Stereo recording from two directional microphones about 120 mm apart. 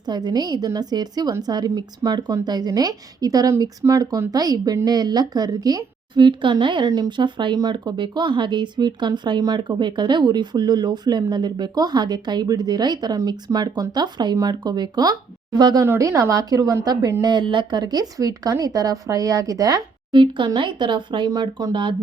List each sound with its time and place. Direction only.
0.1 s a woman's voice: 35° right (ahead or behind)
20.1 s a woman's voice: 40° right (ahead or behind)